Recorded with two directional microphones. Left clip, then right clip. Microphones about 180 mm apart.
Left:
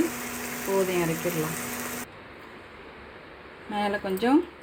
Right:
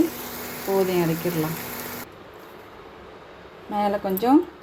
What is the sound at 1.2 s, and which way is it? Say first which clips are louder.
Speech: right 2 dB; centre (ahead or behind).